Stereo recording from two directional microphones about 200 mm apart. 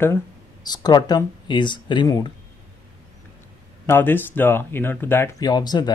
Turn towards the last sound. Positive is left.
turn(degrees=20)  # may be behind; listen again after turning